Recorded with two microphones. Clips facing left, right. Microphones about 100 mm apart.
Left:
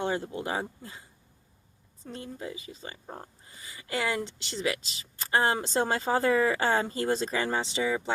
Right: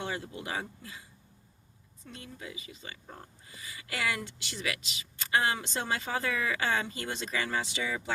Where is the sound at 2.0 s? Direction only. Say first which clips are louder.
Left 7 dB; 30° left (ahead or behind).